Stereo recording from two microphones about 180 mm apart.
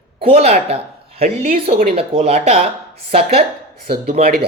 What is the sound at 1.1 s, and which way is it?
Speech, 50° right (ahead or behind).